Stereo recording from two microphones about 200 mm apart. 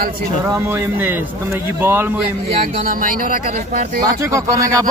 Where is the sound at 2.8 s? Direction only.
45° right (ahead or behind).